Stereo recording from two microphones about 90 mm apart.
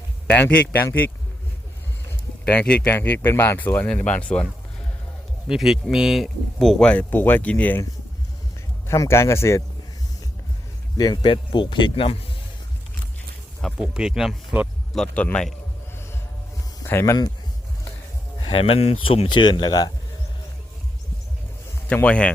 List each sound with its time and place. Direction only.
0.5 s speech: 25° left (ahead or behind)
2.4 s speech: 15° left (ahead or behind)
3.8 s speech: 15° left (ahead or behind)
5.5 s speech: 5° right (ahead or behind)
7.1 s speech: 20° left (ahead or behind)
8.9 s speech: 30° left (ahead or behind)
10.9 s speech: 50° left (ahead or behind); by 12.1 s 75° left (ahead or behind)
13.7 s speech: 10° right (ahead or behind)
14.9 s speech: 15° left (ahead or behind)
16.8 s speech: 30° left (ahead or behind)
18.3 s speech: 80° left; by 19.9 s 50° left (ahead or behind)
21.8 s speech: 15° left (ahead or behind)